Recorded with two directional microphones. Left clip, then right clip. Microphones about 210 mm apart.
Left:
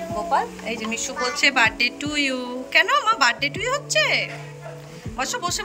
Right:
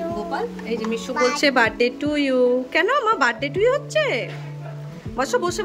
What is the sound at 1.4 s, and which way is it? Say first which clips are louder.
A woman's voice: left 3 dB; 20° right (ahead or behind).